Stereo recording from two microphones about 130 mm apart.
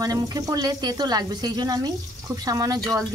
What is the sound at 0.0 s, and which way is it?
A woman's voice, 30° right (ahead or behind).